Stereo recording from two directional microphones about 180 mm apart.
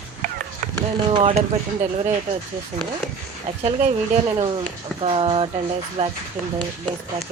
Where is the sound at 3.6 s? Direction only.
35° right (ahead or behind).